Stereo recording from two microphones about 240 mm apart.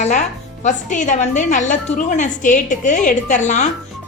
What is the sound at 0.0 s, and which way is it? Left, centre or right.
A woman's voice, left.